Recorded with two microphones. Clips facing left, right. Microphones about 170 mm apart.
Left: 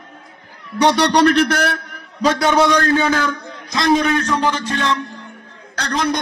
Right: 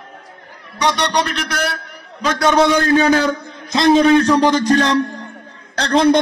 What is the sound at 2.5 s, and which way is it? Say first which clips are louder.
Speech: right 4 dB; centre (ahead or behind).